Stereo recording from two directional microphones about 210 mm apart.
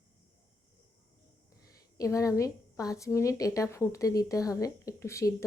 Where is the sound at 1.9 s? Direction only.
15° left (ahead or behind).